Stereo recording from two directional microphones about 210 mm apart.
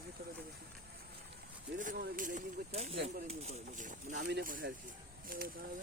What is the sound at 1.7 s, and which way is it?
Speech, 40° right (ahead or behind).